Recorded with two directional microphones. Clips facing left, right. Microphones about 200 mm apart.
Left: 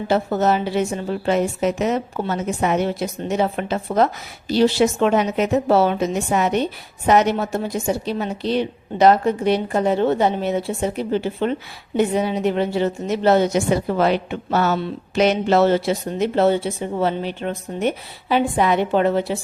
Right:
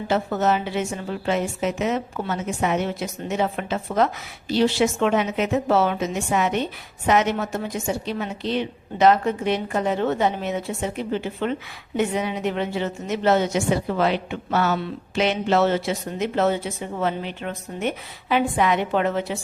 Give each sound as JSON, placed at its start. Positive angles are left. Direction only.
{"t": 0.1, "sound": "a woman's voice", "side_deg": 35}